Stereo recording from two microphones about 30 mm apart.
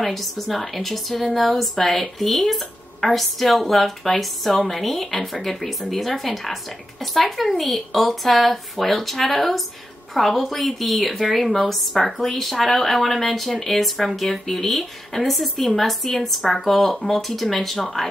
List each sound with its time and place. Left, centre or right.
0.0 s a woman's voice: centre